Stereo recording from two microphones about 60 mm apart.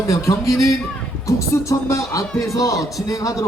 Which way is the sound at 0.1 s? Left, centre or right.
Left.